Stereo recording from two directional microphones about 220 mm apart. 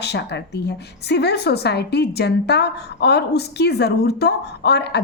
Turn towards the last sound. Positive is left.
turn(degrees=50)  # may be behind; listen again after turning